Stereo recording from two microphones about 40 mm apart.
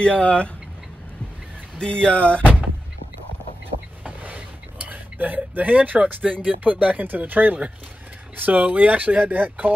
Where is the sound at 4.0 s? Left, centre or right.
Right.